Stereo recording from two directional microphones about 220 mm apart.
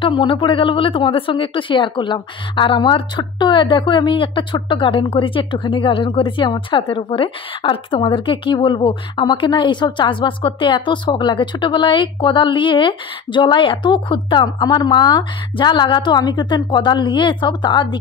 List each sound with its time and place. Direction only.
0.0 s speech: 20° left (ahead or behind)